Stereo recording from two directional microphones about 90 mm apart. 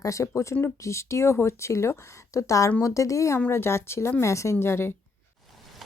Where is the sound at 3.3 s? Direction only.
25° left (ahead or behind).